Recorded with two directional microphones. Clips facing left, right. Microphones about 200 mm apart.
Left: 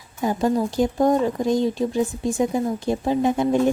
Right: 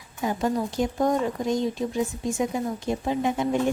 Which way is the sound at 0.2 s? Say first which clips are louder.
Left 4 dB; 35° left (ahead or behind).